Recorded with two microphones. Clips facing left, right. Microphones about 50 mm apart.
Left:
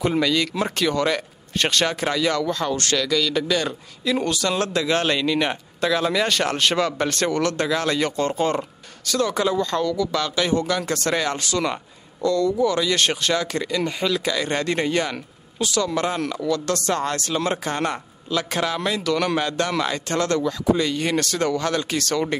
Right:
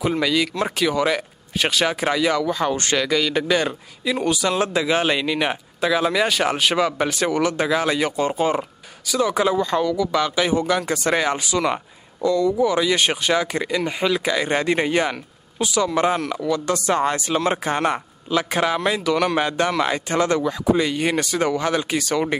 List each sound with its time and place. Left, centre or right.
0.0 s a man's voice: centre; by 3.7 s right
4.0 s a man's voice: centre